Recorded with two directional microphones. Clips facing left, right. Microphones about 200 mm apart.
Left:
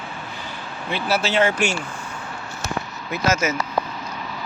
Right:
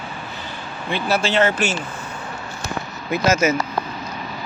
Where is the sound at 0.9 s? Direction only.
5° left (ahead or behind).